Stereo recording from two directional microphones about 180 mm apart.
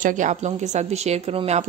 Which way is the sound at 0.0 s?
45° right (ahead or behind).